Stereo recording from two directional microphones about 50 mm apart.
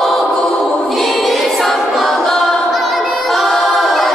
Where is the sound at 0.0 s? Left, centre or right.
Centre.